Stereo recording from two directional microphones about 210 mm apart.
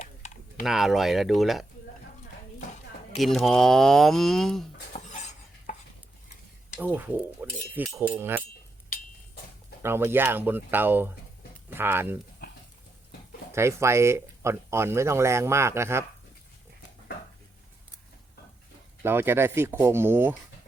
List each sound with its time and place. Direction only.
0.0 s typing: 35° left (ahead or behind)
0.6 s speech: centre (ahead or behind)
3.2 s speech: centre (ahead or behind)
4.9 s stir: 35° left (ahead or behind)
6.7 s speech: 10° right (ahead or behind)
8.9 s a sound: 45° left (ahead or behind)
9.8 s speech: 10° right (ahead or behind)
13.5 s speech: 15° right (ahead or behind)
19.0 s speech: 10° right (ahead or behind)